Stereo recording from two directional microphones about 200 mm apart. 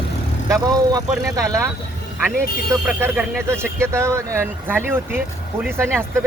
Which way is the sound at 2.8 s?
10° right (ahead or behind).